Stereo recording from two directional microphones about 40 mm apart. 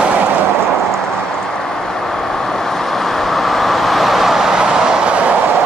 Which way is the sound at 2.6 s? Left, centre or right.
Centre.